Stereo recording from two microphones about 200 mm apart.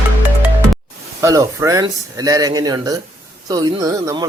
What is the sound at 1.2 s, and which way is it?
Speech, 15° right (ahead or behind).